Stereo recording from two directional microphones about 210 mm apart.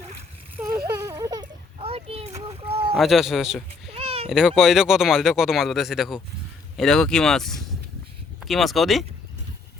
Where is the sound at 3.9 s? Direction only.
30° right (ahead or behind).